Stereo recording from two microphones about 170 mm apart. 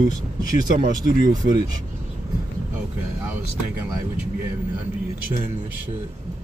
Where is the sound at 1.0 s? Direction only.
25° right (ahead or behind).